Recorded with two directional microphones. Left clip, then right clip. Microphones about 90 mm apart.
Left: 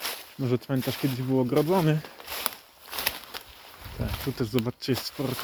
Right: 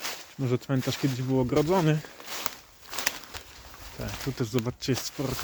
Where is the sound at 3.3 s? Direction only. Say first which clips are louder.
Left 2 dB; 45° left (ahead or behind).